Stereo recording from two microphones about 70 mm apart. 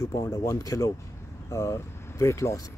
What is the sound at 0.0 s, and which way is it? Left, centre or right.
Speech, left.